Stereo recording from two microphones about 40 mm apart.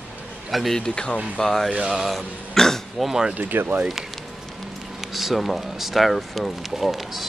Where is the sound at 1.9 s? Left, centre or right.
Centre.